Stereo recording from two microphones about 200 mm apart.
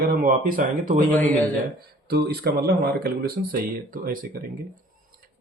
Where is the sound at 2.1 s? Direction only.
50° right (ahead or behind).